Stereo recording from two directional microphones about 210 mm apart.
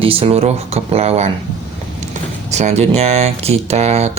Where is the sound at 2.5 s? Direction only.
35° right (ahead or behind).